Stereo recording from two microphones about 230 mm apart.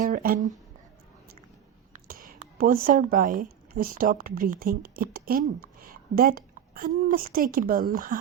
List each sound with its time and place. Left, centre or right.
0.0 s speech: right
1.9 s speech: right